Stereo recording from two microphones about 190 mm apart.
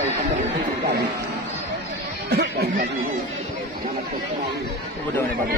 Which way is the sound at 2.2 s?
60° right (ahead or behind).